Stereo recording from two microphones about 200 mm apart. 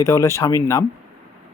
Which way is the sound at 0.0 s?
15° left (ahead or behind).